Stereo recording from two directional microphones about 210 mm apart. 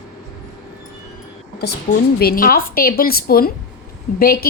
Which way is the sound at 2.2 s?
45° left (ahead or behind).